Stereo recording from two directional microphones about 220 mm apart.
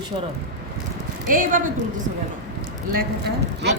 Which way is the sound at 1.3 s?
40° right (ahead or behind).